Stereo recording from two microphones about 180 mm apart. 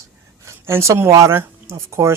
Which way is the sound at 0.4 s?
15° right (ahead or behind).